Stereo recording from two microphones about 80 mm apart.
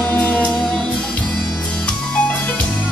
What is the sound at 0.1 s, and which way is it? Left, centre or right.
Music, centre.